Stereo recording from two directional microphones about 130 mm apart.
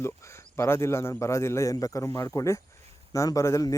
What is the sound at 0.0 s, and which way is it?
Speech, 20° left (ahead or behind).